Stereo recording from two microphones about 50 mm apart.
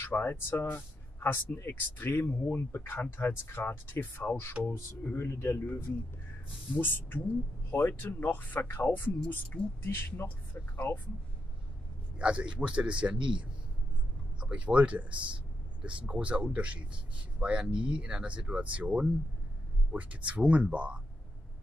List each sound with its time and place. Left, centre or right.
0.0 s speech: left
12.2 s speech: right